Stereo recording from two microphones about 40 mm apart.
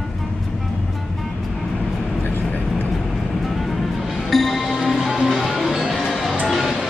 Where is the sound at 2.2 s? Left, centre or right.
Left.